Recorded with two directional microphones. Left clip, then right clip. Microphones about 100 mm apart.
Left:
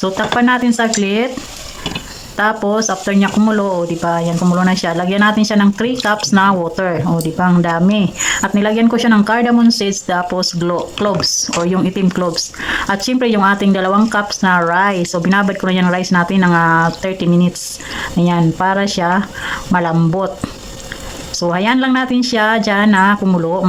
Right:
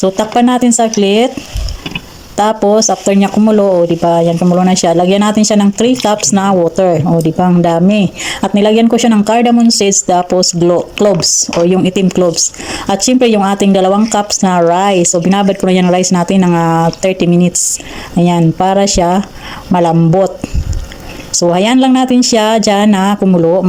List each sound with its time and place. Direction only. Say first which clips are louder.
0.0 s speech: right 4 dB; 30° right (ahead or behind)
2.3 s speech: right 5 dB; 30° right (ahead or behind)
3.5 s speech: right 7 dB; 20° right (ahead or behind)
3.8 s speech: right 7 dB; 30° right (ahead or behind)
21.5 s speech: right 4 dB; 30° right (ahead or behind)